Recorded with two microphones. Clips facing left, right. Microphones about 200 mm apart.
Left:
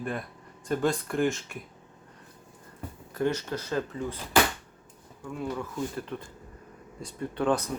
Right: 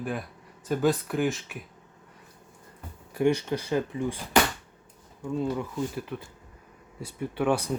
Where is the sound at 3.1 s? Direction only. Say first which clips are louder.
Right 4 dB; 15° right (ahead or behind).